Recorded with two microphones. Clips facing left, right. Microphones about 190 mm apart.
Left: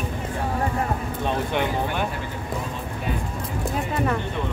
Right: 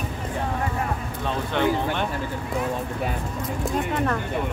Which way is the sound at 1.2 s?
15° left (ahead or behind).